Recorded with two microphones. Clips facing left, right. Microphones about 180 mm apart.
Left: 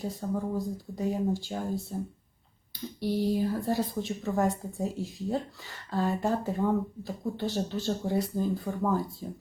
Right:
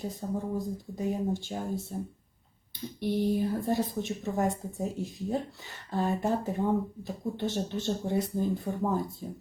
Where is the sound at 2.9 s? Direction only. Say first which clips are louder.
Even; 20° right (ahead or behind).